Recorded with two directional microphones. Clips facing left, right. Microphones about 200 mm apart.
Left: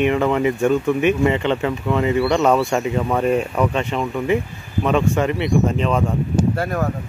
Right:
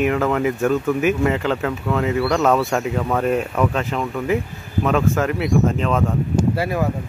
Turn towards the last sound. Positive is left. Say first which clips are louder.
# even
turn(degrees=-5)  # may be behind; listen again after turning